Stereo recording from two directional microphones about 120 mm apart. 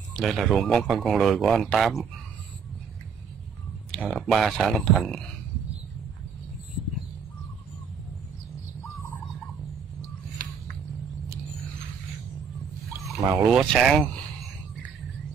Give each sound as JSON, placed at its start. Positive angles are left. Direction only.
{"t": 0.2, "sound": "speech", "side_deg": 0}
{"t": 3.9, "sound": "speech", "side_deg": 5}
{"t": 8.8, "sound": "bird", "side_deg": 20}
{"t": 13.5, "sound": "speech", "side_deg": 0}